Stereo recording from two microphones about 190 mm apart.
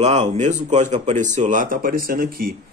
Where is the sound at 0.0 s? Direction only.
35° right (ahead or behind).